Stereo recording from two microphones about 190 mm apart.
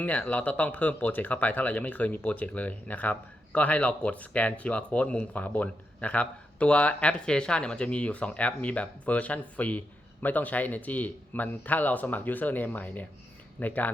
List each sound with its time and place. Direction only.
0.0 s speech: 5° left (ahead or behind)